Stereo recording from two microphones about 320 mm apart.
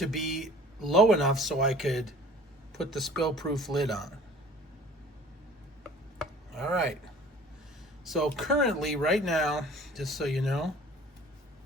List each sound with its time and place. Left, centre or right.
0.0 s speech: centre
6.1 s chopping: centre
8.0 s speech: centre